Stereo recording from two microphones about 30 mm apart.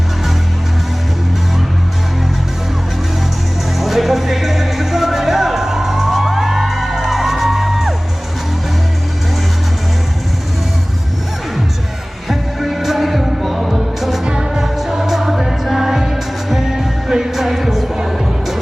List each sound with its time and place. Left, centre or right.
3.8 s music: centre
12.3 s music: centre
14.3 s music: right
14.6 s music: centre